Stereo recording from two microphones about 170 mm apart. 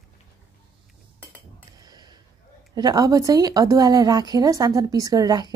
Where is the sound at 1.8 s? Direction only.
25° right (ahead or behind).